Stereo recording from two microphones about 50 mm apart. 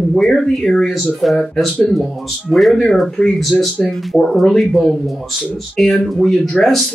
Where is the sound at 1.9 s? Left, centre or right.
Centre.